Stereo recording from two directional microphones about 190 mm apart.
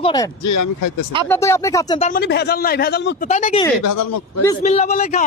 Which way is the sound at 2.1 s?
55° left (ahead or behind).